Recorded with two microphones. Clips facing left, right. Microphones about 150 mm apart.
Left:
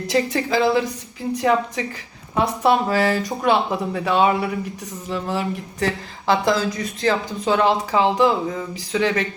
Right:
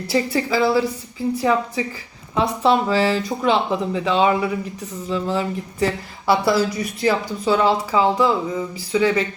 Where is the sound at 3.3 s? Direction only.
10° left (ahead or behind).